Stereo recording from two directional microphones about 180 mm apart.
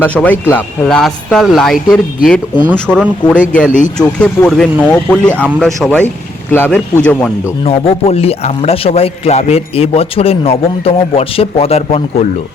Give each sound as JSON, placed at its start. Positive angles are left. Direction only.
{"t": 0.0, "sound": "speech", "side_deg": 10}
{"t": 3.7, "sound": "speech", "side_deg": 45}
{"t": 3.9, "sound": "speech", "side_deg": 5}
{"t": 7.6, "sound": "a man's voice", "side_deg": 35}